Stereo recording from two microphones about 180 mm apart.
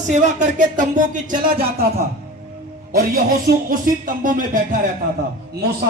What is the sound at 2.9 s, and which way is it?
Speech, 55° right (ahead or behind).